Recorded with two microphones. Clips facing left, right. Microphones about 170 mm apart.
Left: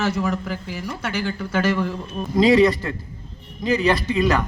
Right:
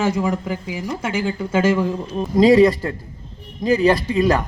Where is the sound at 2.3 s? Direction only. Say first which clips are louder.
Right 3 dB; 35° right (ahead or behind).